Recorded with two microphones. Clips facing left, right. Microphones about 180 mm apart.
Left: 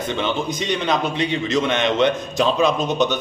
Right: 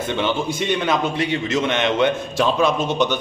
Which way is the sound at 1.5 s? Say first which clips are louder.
Left 1 dB; 5° right (ahead or behind).